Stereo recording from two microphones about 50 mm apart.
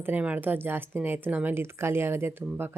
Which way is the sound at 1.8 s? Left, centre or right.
Right.